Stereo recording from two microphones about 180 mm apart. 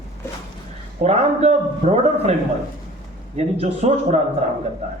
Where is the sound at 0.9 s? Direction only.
35° right (ahead or behind).